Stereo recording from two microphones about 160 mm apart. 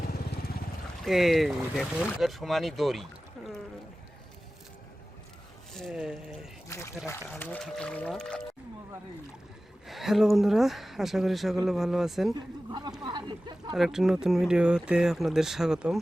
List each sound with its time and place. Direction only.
1.0 s speech: centre (ahead or behind)
5.7 s speech: centre (ahead or behind)
6.7 s speech: 20° left (ahead or behind)
9.8 s speech: centre (ahead or behind)
12.3 s speech: 25° right (ahead or behind)
13.7 s speech: centre (ahead or behind)